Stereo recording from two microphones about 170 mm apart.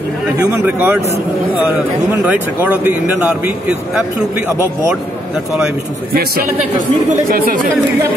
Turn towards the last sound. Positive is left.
turn(degrees=-60)  # may be behind; listen again after turning